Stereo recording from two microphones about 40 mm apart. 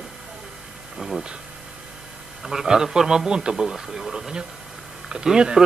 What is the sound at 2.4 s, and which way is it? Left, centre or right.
A man's voice, centre.